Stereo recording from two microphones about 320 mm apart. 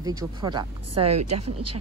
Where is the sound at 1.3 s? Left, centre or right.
Right.